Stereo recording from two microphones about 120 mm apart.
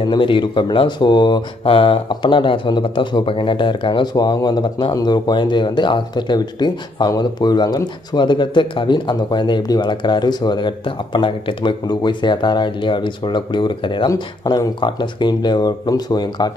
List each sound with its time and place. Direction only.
0.0 s speech: 45° left (ahead or behind)